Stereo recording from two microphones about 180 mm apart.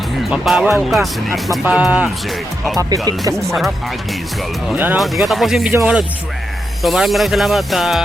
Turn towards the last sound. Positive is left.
turn(degrees=0)  # may be behind; listen again after turning